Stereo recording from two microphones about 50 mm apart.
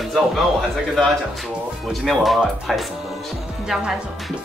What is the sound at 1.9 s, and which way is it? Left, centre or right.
Speech, centre.